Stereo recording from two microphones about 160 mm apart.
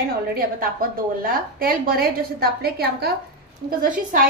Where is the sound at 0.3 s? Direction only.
60° right (ahead or behind); by 3.2 s 75° right (ahead or behind).